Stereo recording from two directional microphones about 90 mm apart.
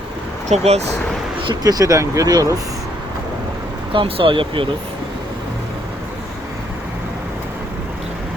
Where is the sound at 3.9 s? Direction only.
80° right.